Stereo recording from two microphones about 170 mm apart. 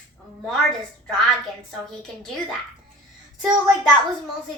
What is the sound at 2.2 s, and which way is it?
Speech, centre (ahead or behind).